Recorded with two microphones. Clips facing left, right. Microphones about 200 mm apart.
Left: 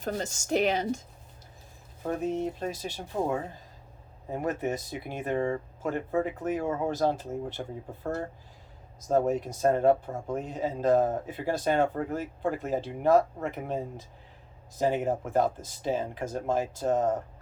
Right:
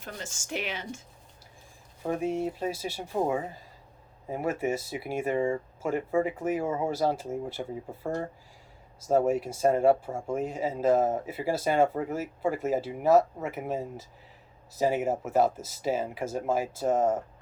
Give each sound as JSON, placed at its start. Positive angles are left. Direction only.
{"t": 0.0, "sound": "speech", "side_deg": 40}
{"t": 2.0, "sound": "speech", "side_deg": -10}